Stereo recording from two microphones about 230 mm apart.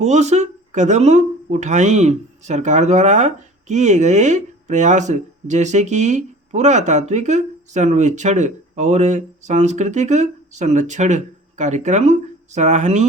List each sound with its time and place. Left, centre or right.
0.0 s speech: right